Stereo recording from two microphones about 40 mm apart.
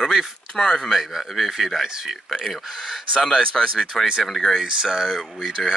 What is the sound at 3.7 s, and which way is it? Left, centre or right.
Speech, centre.